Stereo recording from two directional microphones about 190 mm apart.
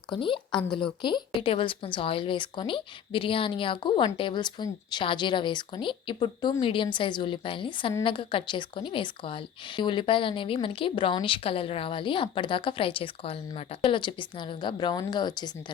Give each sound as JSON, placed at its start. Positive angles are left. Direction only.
{"t": 0.1, "sound": "speech", "side_deg": 25}